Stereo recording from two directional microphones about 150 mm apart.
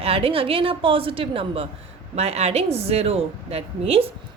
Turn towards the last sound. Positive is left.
turn(degrees=-40)  # may be behind; listen again after turning